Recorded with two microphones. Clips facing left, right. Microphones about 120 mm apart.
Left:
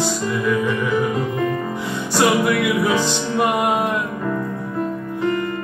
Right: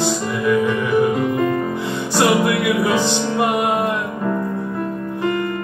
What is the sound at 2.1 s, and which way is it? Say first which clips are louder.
Music: right 1 dB; 15° right (ahead or behind).